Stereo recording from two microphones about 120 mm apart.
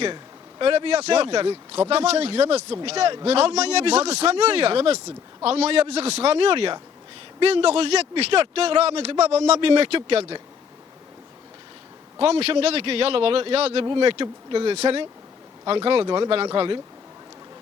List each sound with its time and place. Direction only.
0.6 s a man's voice: 50° right (ahead or behind)
12.2 s a man's voice: 55° right (ahead or behind)
13.8 s speech: 45° right (ahead or behind)